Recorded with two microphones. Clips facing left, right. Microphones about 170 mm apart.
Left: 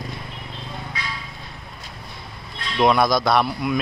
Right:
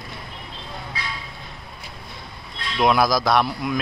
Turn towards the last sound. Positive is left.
turn(degrees=0)  # may be behind; listen again after turning